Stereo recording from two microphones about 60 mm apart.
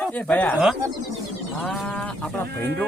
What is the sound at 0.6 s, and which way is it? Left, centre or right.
Speech, centre.